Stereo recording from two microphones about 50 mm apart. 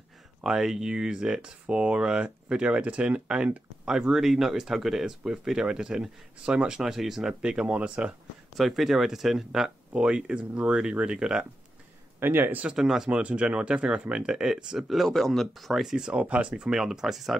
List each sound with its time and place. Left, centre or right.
0.4 s speech: centre
6.8 s speech: centre
7.4 s speech: centre
8.5 s speech: centre
9.9 s speech: centre
12.2 s speech: right
12.7 s speech: centre
13.1 s speech: right; by 15.8 s centre
15.8 s speech: centre
16.1 s speech: right
16.7 s speech: centre